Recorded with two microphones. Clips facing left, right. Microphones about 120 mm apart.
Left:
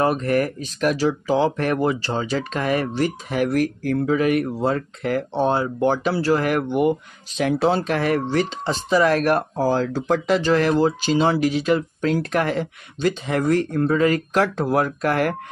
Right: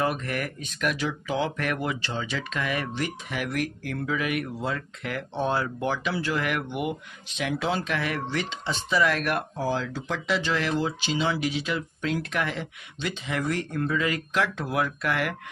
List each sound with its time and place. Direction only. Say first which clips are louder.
0.0 s speech: left 8 dB; 40° left (ahead or behind)